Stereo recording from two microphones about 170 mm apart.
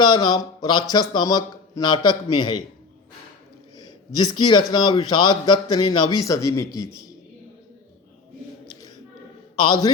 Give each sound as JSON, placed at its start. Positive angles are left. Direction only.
{"t": 0.0, "sound": "speech", "side_deg": 25}
{"t": 3.8, "sound": "speech", "side_deg": 25}
{"t": 9.6, "sound": "speech", "side_deg": 25}